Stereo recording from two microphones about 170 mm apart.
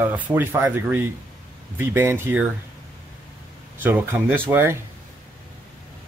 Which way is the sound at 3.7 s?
10° right (ahead or behind).